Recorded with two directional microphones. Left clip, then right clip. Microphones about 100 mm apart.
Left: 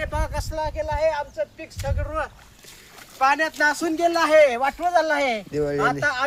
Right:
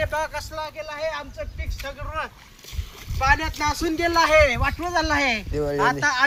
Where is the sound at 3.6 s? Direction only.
80° left.